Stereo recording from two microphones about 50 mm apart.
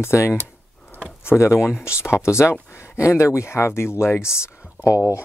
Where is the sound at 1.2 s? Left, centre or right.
Left.